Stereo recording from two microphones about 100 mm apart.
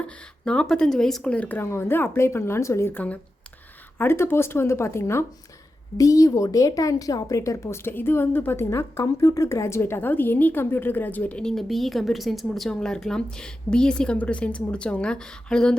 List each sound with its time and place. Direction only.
0.0 s a woman's voice: 10° left (ahead or behind)